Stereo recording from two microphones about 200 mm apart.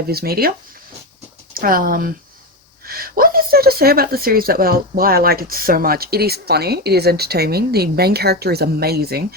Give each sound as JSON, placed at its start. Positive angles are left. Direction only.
{"t": 0.1, "sound": "speech", "side_deg": -50}
{"t": 1.5, "sound": "speech", "side_deg": -45}